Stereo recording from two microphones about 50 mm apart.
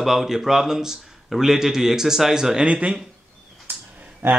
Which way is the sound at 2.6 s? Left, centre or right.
Right.